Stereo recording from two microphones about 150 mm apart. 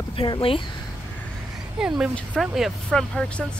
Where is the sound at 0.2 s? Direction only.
35° left (ahead or behind).